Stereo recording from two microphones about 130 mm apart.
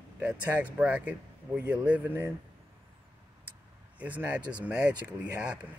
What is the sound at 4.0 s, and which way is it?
Speech, 10° right (ahead or behind).